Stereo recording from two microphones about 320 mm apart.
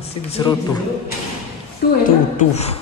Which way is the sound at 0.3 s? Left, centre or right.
Centre.